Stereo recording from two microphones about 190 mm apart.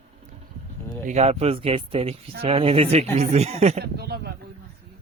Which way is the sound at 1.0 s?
35° right (ahead or behind).